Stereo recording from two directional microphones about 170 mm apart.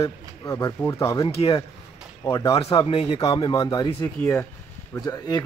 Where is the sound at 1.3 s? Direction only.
35° left (ahead or behind).